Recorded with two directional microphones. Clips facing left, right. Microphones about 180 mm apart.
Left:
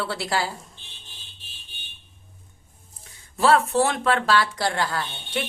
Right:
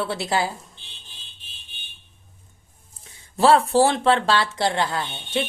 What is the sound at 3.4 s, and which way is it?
Speech, 30° right (ahead or behind).